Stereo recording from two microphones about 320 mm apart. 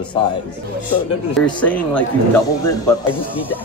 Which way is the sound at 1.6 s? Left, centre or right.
Centre.